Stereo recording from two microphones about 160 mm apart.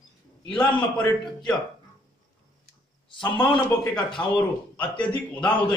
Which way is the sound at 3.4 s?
30° left (ahead or behind).